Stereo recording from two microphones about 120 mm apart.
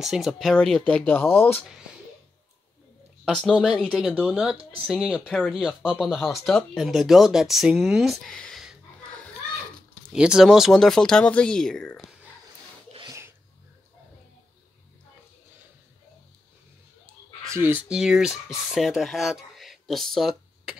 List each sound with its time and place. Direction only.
0.0 s speech: centre (ahead or behind); by 1.7 s 15° left (ahead or behind)
3.4 s speech: 5° right (ahead or behind)
10.1 s speech: 5° right (ahead or behind)
13.0 s sneeze: 25° right (ahead or behind)
17.5 s speech: 20° right (ahead or behind)
17.8 s speech: 5° right (ahead or behind)